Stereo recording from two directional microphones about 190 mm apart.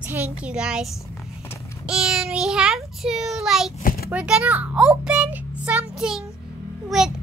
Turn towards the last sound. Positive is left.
turn(degrees=0)  # may be behind; listen again after turning